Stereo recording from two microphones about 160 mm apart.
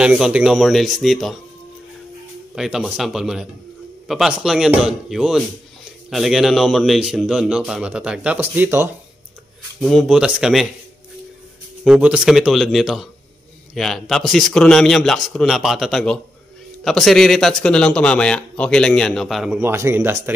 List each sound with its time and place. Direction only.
0.0 s a man's voice: 5° right (ahead or behind)
2.5 s a man's voice: 5° right (ahead or behind)
9.8 s a man's voice: centre (ahead or behind)
11.8 s a man's voice: 5° right (ahead or behind)
19.6 s speech: 15° right (ahead or behind)